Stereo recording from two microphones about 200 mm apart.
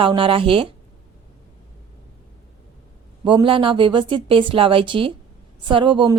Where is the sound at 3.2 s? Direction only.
25° right (ahead or behind).